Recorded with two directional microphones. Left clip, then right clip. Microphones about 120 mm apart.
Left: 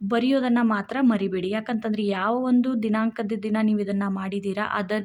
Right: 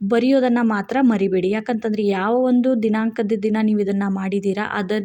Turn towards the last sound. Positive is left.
turn(degrees=-20)  # may be behind; listen again after turning